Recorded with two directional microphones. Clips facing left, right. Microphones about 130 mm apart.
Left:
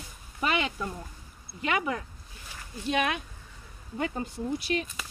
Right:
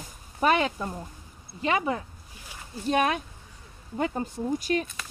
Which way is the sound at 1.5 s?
30° right (ahead or behind).